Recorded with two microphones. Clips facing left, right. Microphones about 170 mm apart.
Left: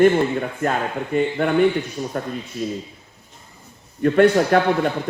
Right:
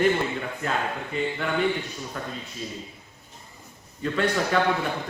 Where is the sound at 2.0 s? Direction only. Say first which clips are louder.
Left 9 dB; 40° left (ahead or behind).